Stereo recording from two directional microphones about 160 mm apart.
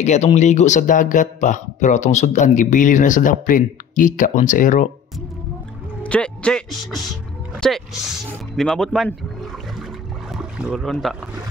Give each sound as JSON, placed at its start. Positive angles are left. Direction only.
{"t": 0.0, "sound": "speech", "side_deg": 45}
{"t": 6.0, "sound": "a man's voice", "side_deg": 5}
{"t": 7.6, "sound": "speech", "side_deg": 0}